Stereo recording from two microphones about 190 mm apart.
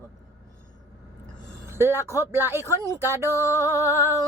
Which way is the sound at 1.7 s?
10° right (ahead or behind).